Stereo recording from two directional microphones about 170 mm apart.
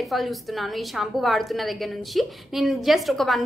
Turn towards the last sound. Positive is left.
turn(degrees=0)  # may be behind; listen again after turning